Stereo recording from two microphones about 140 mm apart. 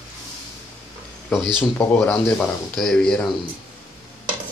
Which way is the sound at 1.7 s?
15° left (ahead or behind).